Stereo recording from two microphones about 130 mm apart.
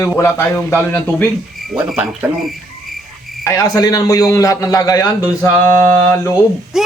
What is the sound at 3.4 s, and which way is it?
A man's voice, 25° left (ahead or behind).